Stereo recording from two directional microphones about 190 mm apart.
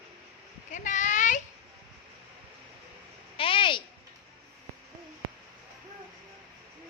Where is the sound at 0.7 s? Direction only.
40° left (ahead or behind).